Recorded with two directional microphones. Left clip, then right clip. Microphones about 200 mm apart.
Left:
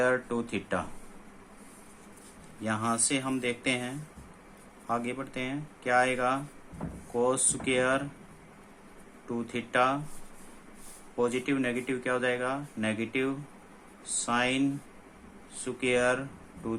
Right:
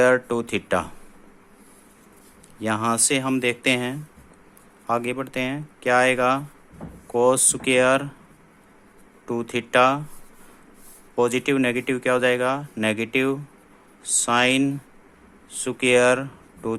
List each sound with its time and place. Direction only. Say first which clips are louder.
0.0 s speech: right 9 dB; 55° right (ahead or behind)
2.6 s speech: right 8 dB; 50° right (ahead or behind)
9.2 s speech: right 9 dB; 50° right (ahead or behind)
11.2 s speech: right 8 dB; 50° right (ahead or behind)